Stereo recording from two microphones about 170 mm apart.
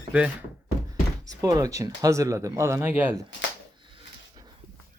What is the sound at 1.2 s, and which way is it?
Speech, 20° right (ahead or behind).